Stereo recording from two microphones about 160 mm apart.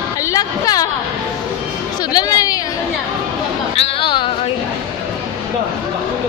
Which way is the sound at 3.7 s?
35° left (ahead or behind).